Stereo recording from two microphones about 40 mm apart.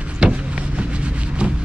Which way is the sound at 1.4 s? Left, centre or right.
Right.